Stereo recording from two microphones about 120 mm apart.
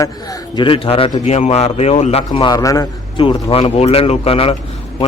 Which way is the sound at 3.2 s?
50° left (ahead or behind).